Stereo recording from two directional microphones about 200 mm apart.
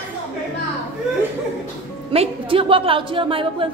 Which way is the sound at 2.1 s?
25° right (ahead or behind).